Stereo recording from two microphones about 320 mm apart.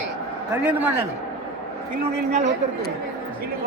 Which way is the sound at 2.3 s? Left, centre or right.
Right.